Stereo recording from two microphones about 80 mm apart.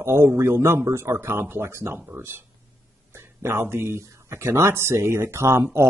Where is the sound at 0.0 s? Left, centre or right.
Right.